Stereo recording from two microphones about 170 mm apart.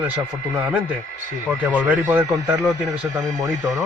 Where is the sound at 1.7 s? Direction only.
10° right (ahead or behind).